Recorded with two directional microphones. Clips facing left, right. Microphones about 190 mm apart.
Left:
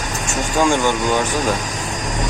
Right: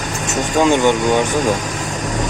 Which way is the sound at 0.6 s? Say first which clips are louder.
Right 4 dB; 20° right (ahead or behind).